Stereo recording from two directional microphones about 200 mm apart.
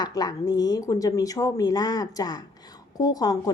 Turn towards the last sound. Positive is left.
turn(degrees=20)  # may be behind; listen again after turning